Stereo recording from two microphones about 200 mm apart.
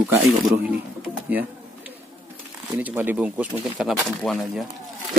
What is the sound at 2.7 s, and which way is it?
Speech, 10° right (ahead or behind).